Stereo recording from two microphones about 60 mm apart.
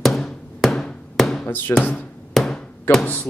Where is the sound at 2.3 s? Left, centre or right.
Centre.